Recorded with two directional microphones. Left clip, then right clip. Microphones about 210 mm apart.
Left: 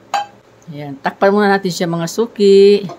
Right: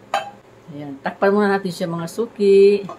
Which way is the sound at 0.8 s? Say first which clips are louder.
Left 5 dB; 30° left (ahead or behind).